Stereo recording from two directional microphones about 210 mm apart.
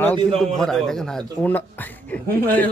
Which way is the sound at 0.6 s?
Centre (ahead or behind).